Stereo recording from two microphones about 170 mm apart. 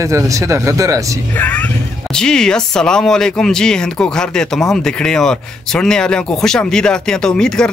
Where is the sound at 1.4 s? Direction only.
10° left (ahead or behind).